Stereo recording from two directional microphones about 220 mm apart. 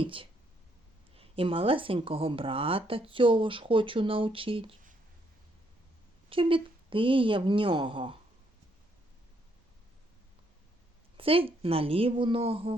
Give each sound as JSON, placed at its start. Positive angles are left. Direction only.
{"t": 0.0, "sound": "speech", "side_deg": -25}
{"t": 6.3, "sound": "speech", "side_deg": -25}
{"t": 11.2, "sound": "speech", "side_deg": -25}